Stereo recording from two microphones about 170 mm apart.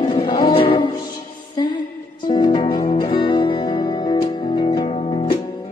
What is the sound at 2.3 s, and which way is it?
Music, 25° left (ahead or behind).